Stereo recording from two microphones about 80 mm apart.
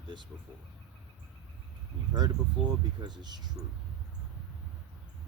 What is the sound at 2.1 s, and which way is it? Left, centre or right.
Speech, right.